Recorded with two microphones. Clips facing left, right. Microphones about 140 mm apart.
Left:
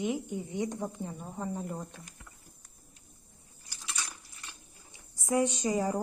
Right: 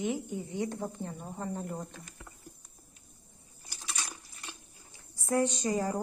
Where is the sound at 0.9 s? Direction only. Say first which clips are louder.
Left 1 dB; 10° left (ahead or behind).